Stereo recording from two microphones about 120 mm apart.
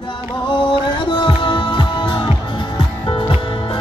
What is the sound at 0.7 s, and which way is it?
Music, 40° left (ahead or behind).